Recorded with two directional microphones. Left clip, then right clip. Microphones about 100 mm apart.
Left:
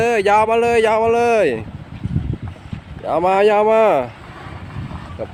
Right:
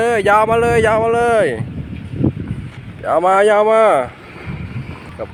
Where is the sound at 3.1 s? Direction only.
35° left (ahead or behind).